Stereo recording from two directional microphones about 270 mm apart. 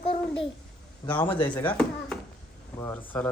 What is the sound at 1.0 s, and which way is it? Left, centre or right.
Speech, centre.